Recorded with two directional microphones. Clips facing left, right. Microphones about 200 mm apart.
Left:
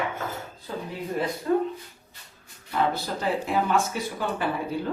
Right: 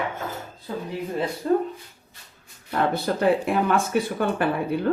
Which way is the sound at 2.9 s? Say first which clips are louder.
Right 7 dB; 60° right (ahead or behind).